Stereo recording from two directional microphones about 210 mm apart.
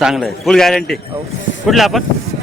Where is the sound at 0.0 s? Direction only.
Centre (ahead or behind).